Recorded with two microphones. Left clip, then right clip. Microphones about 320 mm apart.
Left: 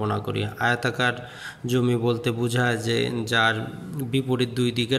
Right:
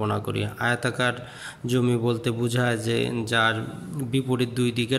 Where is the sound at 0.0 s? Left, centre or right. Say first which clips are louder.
Even; centre.